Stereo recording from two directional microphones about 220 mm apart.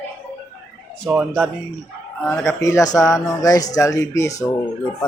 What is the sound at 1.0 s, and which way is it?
Speech, 5° right (ahead or behind).